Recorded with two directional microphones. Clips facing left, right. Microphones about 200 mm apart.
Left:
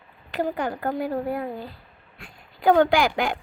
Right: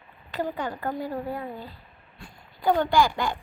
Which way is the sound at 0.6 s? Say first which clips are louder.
Left 4 dB; 50° left (ahead or behind).